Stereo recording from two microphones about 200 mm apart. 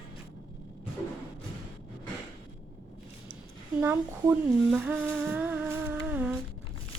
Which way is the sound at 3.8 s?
10° right (ahead or behind).